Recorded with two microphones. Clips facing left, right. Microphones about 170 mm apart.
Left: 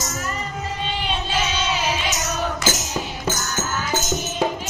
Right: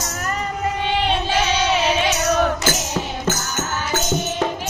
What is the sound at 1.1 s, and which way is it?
Music, 70° right (ahead or behind).